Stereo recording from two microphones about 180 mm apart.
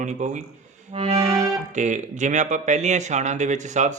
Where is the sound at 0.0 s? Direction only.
40° right (ahead or behind).